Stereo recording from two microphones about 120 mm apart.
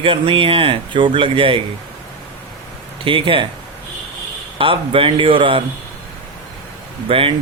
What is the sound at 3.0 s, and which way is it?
Speech, 45° right (ahead or behind).